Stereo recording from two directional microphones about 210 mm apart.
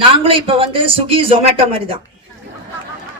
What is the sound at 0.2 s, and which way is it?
A woman's voice, 25° right (ahead or behind).